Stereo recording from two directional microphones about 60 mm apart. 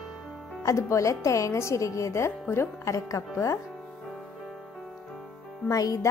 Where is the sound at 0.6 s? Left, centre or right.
Left.